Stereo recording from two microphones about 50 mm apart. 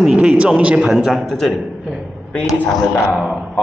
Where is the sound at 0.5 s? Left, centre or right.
Right.